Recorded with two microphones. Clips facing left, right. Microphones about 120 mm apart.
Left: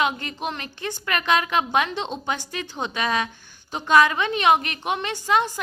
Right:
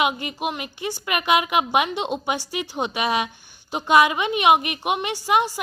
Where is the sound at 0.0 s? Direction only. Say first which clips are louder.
Right 2 dB; 15° right (ahead or behind).